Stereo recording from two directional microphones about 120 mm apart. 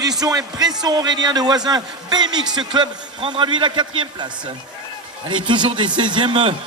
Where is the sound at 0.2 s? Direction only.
30° right (ahead or behind).